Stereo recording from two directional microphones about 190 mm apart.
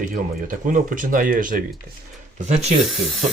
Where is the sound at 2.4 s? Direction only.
35° right (ahead or behind).